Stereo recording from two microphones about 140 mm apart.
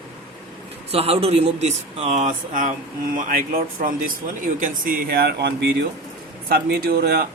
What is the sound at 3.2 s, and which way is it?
Speech, 80° right.